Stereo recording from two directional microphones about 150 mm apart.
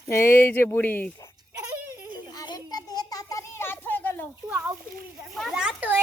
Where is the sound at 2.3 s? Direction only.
25° left (ahead or behind).